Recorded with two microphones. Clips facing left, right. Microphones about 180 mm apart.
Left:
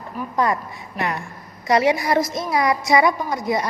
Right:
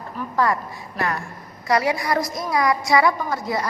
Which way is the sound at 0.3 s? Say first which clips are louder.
Even; 20° left (ahead or behind).